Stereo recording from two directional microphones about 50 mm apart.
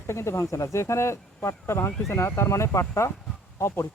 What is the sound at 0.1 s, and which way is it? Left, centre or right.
Speech, left.